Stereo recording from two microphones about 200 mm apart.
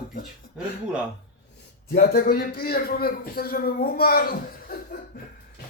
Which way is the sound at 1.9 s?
50° left (ahead or behind).